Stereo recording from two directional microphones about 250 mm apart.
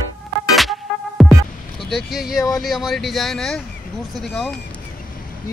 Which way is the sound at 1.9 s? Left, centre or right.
Centre.